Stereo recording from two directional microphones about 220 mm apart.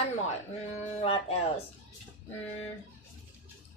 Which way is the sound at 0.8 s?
25° left (ahead or behind).